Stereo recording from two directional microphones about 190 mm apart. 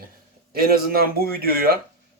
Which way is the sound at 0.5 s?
50° right (ahead or behind).